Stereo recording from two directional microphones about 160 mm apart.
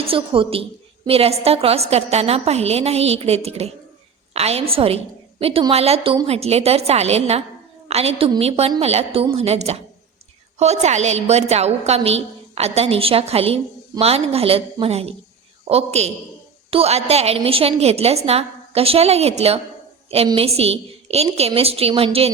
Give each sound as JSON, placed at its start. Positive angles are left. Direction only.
{"t": 0.0, "sound": "a woman's voice", "side_deg": -35}